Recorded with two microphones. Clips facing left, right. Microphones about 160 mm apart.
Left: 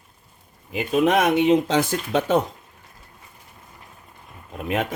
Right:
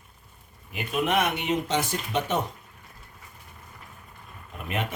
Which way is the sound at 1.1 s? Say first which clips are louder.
Left 9 dB; 90° left.